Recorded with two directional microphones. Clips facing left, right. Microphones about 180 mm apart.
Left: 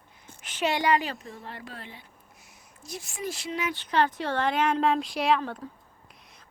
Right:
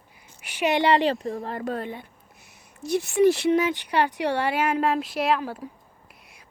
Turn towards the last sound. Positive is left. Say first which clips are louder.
# right 2 dB
turn(degrees=-10)  # may be behind; listen again after turning